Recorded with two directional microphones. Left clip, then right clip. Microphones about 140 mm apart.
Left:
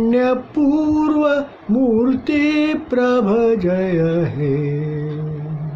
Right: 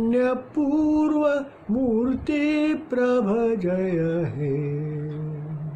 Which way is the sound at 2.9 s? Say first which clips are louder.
Left 6 dB; 10° right (ahead or behind).